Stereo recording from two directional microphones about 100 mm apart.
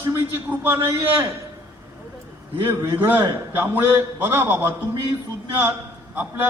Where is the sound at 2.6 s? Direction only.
25° right (ahead or behind).